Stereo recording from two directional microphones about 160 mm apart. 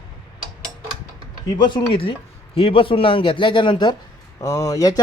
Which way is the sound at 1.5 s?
30° left (ahead or behind).